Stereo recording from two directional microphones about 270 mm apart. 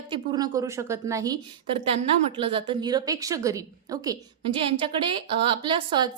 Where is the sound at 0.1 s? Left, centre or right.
Centre.